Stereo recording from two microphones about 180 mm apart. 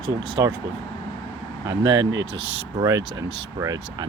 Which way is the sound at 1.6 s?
25° right (ahead or behind).